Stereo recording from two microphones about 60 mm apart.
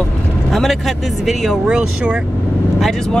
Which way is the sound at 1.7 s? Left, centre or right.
Centre.